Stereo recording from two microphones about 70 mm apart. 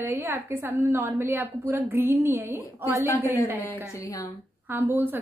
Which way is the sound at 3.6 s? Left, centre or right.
Left.